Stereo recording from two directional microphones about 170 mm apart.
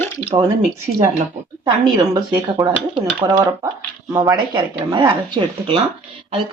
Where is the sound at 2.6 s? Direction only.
20° right (ahead or behind).